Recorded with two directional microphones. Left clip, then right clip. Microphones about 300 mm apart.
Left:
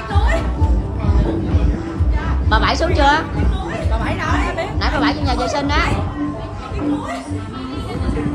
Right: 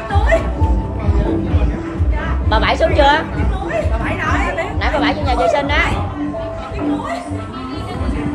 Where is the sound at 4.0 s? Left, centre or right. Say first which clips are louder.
Right 2 dB; left.